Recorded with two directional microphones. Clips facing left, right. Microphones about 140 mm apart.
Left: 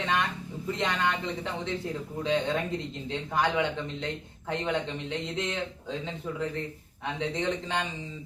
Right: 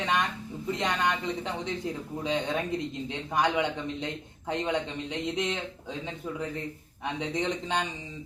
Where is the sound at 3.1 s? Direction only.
15° right (ahead or behind).